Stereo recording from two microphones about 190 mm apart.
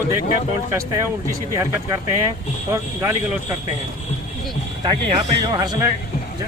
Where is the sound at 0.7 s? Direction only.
15° right (ahead or behind).